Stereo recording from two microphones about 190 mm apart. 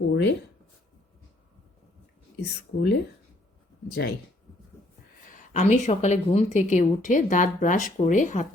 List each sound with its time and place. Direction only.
0.1 s speech: 65° left (ahead or behind)
2.4 s speech: 60° left (ahead or behind)
5.3 s a woman's voice: 40° left (ahead or behind)